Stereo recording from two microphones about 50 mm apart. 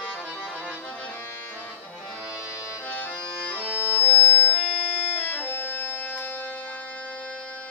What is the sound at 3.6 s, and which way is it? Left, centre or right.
Music, right.